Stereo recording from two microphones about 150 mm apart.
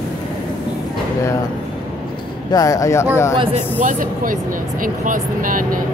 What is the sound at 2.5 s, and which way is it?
Speech, 25° left (ahead or behind).